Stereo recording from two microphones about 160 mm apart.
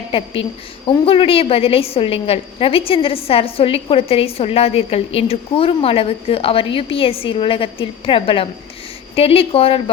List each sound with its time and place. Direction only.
0.1 s a woman's voice: 35° left (ahead or behind)